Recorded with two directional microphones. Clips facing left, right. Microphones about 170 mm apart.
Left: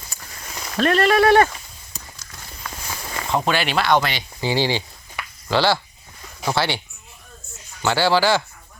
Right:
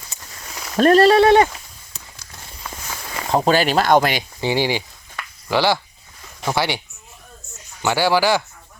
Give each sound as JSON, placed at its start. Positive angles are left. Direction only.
{"t": 0.1, "sound": "a sound", "side_deg": -20}
{"t": 0.8, "sound": "speech", "side_deg": -40}
{"t": 3.2, "sound": "speech", "side_deg": -40}
{"t": 4.4, "sound": "speech", "side_deg": -15}